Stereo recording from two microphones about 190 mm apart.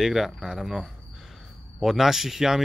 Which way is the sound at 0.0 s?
Centre (ahead or behind).